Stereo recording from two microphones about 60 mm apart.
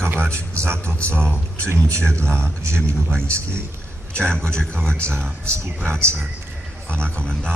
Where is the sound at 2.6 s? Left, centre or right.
Right.